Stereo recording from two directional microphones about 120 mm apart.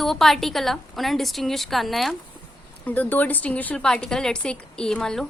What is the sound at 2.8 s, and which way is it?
A woman's voice, 15° left (ahead or behind).